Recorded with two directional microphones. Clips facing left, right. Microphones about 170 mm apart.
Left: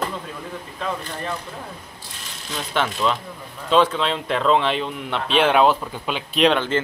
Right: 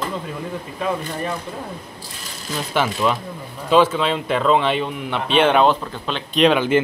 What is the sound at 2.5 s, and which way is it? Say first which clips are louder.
A man's voice: right 3 dB; 5° right (ahead or behind).